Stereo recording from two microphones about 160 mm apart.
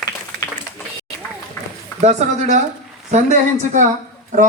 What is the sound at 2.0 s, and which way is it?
Speech, 45° right (ahead or behind).